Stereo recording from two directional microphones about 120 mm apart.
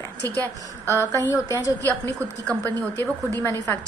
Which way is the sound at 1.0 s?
25° left (ahead or behind).